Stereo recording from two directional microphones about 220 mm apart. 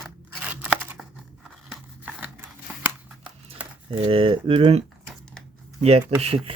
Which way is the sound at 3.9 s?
25° right (ahead or behind).